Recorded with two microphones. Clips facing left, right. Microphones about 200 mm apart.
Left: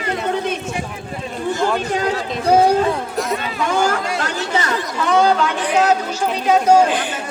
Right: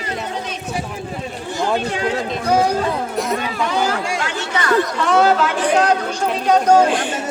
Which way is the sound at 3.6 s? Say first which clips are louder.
Left 3 dB; 50° left (ahead or behind).